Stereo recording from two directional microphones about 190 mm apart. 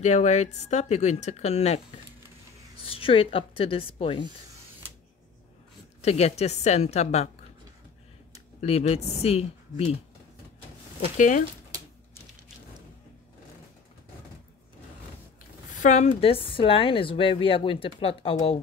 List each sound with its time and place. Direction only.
0.0 s speech: 35° left (ahead or behind)
2.8 s a woman's voice: 30° left (ahead or behind)
5.9 s speech: 35° left (ahead or behind)
8.5 s speech: 35° left (ahead or behind)
11.1 s speech: 40° left (ahead or behind)
15.7 s a woman's voice: 40° left (ahead or behind)